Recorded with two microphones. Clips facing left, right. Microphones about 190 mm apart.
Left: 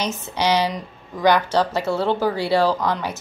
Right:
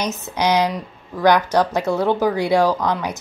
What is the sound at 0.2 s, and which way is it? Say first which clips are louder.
Speech: right 2 dB; 15° right (ahead or behind).